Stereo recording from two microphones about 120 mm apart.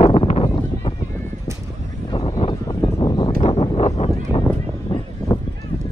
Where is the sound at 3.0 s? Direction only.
35° left (ahead or behind).